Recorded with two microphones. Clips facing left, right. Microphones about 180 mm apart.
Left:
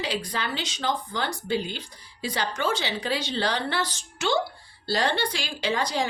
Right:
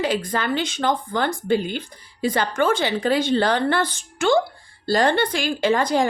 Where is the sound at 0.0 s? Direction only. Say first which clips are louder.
Right 7 dB; 50° right (ahead or behind).